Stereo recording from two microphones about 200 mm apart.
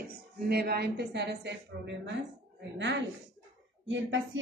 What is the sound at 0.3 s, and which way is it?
A woman's voice, 50° right (ahead or behind).